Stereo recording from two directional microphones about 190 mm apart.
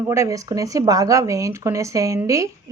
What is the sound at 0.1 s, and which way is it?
Speech, 15° right (ahead or behind).